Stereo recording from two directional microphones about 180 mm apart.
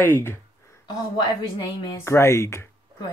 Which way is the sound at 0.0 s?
15° left (ahead or behind).